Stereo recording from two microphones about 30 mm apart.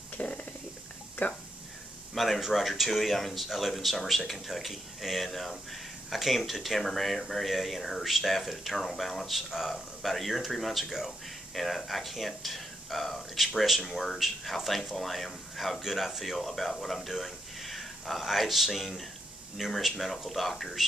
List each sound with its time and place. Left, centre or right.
0.2 s a sound: left
1.2 s speech: left
2.1 s speech: centre
9.5 s speech: centre
10.0 s speech: centre
10.8 s speech: centre
11.5 s speech: centre
13.4 s speech: centre
13.7 s speech: centre
16.3 s speech: centre